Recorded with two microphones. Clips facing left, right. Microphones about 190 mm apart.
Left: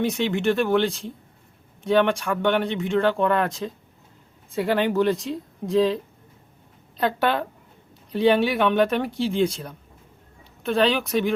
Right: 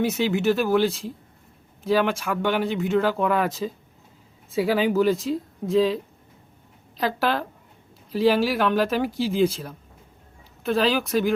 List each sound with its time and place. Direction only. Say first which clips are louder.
0.0 s speech: right 1 dB; 5° right (ahead or behind)